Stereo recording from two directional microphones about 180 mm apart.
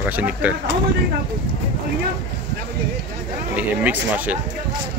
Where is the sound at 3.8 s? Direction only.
10° right (ahead or behind).